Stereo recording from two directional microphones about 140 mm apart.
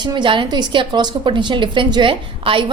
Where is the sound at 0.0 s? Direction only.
35° right (ahead or behind).